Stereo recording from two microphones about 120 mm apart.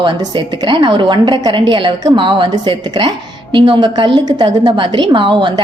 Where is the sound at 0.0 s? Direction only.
40° right (ahead or behind).